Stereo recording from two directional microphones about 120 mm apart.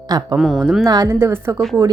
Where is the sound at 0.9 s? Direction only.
30° right (ahead or behind).